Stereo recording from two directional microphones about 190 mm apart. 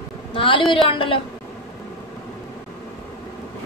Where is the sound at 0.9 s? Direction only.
25° left (ahead or behind).